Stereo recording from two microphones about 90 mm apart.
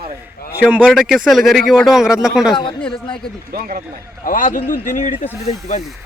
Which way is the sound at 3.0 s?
65° left (ahead or behind).